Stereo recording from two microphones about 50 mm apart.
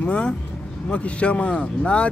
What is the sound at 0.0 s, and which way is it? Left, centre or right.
Speech, left.